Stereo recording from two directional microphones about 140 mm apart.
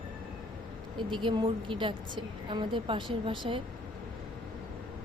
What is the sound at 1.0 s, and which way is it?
A woman's voice, 35° right (ahead or behind).